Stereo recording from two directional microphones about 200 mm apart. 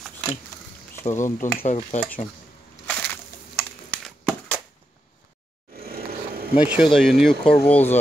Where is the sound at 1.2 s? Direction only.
35° left (ahead or behind).